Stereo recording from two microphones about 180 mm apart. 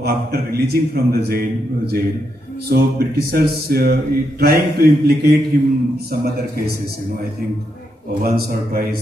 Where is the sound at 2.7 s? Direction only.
60° right (ahead or behind).